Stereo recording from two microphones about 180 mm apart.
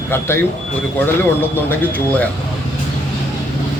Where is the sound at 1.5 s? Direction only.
10° left (ahead or behind).